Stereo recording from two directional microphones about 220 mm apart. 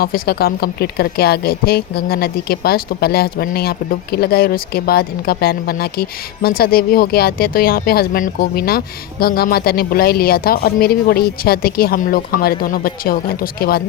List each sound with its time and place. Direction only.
0.0 s speech: 45° left (ahead or behind)